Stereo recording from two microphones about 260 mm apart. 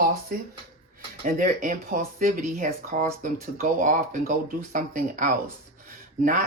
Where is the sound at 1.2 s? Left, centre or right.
Right.